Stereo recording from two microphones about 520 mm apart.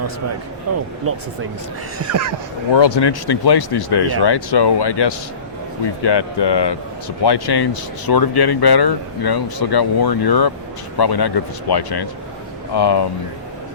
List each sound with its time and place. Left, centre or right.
1.1 s speech: right
2.0 s speech: right
2.7 s speech: left